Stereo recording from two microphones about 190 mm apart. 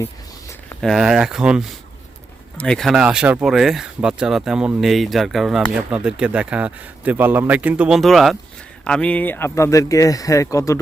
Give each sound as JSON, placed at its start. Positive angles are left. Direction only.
{"t": 0.8, "sound": "speech", "side_deg": 0}